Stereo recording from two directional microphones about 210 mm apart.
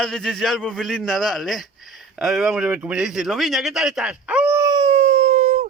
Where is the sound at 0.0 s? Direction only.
Centre (ahead or behind).